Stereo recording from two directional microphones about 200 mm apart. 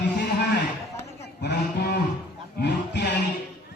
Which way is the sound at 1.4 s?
60° left (ahead or behind).